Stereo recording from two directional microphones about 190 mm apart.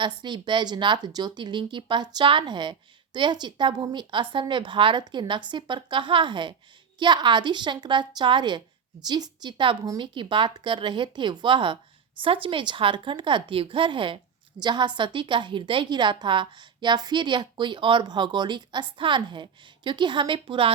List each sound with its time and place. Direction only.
0.0 s speech: 25° right (ahead or behind)